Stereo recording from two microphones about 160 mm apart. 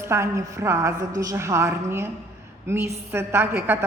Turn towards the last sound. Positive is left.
turn(degrees=-15)  # may be behind; listen again after turning